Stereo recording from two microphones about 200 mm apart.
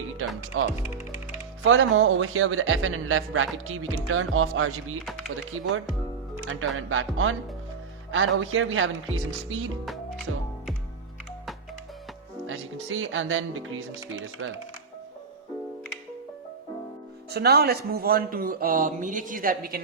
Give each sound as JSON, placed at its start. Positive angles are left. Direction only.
{"t": 0.2, "sound": "a man's voice", "side_deg": -85}
{"t": 6.5, "sound": "a man's voice", "side_deg": -90}
{"t": 8.1, "sound": "speech", "side_deg": -80}
{"t": 12.5, "sound": "a man's voice", "side_deg": -85}
{"t": 17.2, "sound": "speech", "side_deg": -55}